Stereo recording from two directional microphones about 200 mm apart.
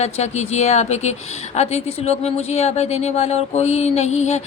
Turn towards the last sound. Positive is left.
turn(degrees=35)  # may be behind; listen again after turning